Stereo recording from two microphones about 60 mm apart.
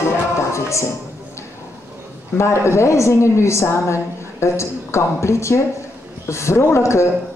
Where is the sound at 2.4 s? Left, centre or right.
Left.